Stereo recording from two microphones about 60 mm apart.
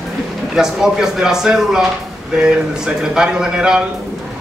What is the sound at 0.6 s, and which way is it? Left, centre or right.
Speech, centre.